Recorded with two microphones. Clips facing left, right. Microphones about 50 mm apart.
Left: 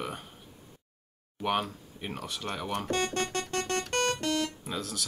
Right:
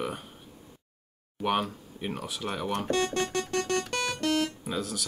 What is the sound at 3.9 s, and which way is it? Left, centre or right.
Music, left.